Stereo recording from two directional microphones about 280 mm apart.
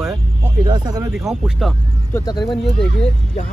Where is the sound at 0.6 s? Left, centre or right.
Centre.